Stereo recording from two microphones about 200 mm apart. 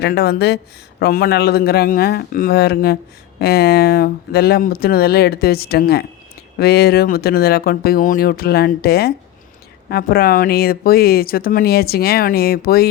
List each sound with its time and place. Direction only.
0.0 s speech: 50° left (ahead or behind)